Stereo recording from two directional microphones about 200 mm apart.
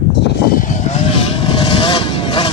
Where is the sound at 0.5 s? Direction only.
40° left (ahead or behind).